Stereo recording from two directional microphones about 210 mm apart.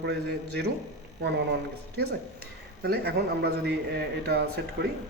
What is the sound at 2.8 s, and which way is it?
Speech, 50° right (ahead or behind).